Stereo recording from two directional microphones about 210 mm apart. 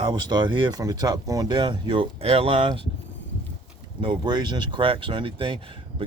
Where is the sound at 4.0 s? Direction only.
20° right (ahead or behind).